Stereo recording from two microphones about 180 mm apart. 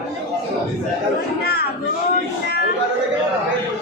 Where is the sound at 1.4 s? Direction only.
60° left (ahead or behind).